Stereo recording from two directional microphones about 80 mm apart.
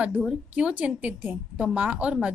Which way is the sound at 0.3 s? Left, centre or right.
Centre.